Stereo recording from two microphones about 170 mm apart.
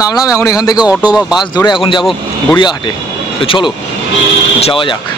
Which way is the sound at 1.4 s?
25° left (ahead or behind).